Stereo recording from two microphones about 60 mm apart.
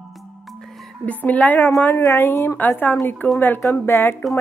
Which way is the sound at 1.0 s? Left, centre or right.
Left.